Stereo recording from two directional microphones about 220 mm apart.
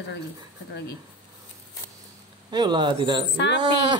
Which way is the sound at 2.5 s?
20° right (ahead or behind).